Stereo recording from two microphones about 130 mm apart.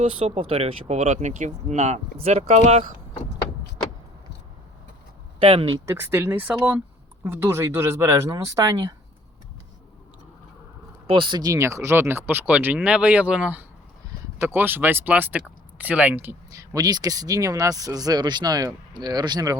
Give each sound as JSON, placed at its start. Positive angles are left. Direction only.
{"t": 0.0, "sound": "speech", "side_deg": -50}
{"t": 5.4, "sound": "speech", "side_deg": -50}
{"t": 5.8, "sound": "speech", "side_deg": -20}
{"t": 11.0, "sound": "speech", "side_deg": -40}